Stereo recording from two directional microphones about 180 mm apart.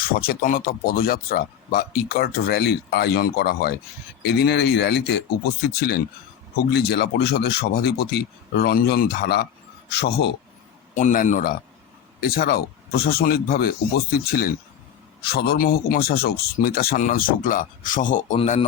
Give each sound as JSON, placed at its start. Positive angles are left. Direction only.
{"t": 0.0, "sound": "speech", "side_deg": 55}
{"t": 10.9, "sound": "speech", "side_deg": 45}